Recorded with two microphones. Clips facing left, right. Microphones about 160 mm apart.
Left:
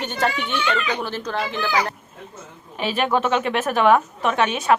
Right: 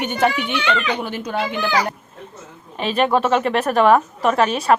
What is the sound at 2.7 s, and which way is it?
A man's voice, 5° left (ahead or behind).